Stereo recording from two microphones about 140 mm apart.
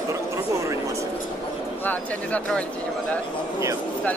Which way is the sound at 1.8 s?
10° left (ahead or behind).